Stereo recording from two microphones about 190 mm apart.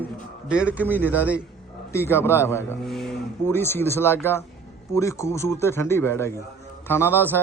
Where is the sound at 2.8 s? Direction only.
Centre (ahead or behind).